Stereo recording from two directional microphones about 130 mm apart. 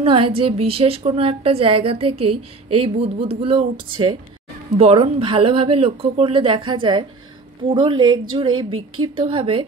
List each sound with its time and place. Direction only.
0.0 s a woman's voice: 45° right (ahead or behind)